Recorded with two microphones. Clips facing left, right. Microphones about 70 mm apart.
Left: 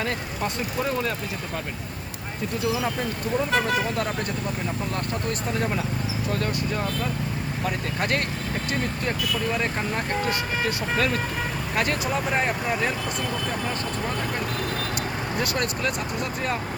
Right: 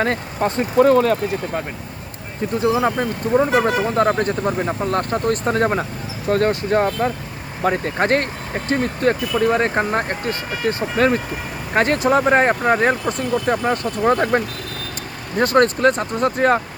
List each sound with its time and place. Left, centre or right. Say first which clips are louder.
0.0 s speech: right 8 dB; right
0.9 s speech: right 12 dB; right
2.6 s speech: right 8 dB; right
14.1 s speech: right 16 dB; right
15.4 s speech: right 14 dB; right